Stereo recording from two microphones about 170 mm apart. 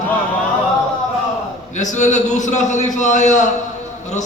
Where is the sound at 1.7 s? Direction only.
45° left (ahead or behind).